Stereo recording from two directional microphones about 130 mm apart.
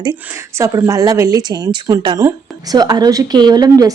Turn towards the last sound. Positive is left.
turn(degrees=-30)  # may be behind; listen again after turning